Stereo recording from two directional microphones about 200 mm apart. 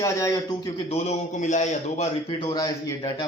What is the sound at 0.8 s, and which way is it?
A man's voice, 30° left (ahead or behind).